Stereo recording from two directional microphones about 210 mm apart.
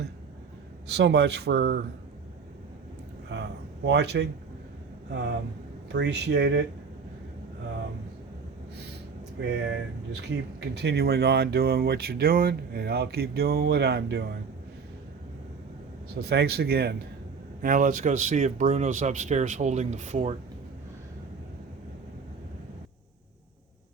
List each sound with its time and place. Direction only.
0.9 s speech: 55° right (ahead or behind)
3.3 s a sound: 55° right (ahead or behind)
3.8 s speech: 55° right (ahead or behind)
5.9 s speech: 55° right (ahead or behind)
9.4 s speech: 55° right (ahead or behind)
16.2 s speech: 50° right (ahead or behind); by 20.3 s 35° right (ahead or behind)